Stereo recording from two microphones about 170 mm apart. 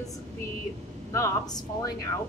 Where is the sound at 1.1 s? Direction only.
20° left (ahead or behind).